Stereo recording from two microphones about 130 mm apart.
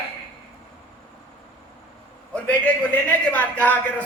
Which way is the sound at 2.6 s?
15° left (ahead or behind).